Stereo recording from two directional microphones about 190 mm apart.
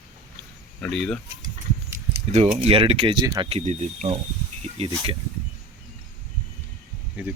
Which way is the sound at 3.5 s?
35° right (ahead or behind).